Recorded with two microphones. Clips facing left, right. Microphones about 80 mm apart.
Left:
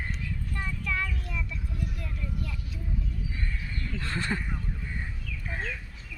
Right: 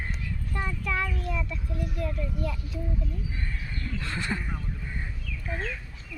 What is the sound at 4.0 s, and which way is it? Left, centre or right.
Speech, left.